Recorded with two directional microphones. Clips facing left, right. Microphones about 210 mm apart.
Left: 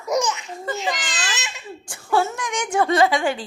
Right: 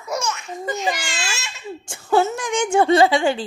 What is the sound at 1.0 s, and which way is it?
Crying, 20° left (ahead or behind).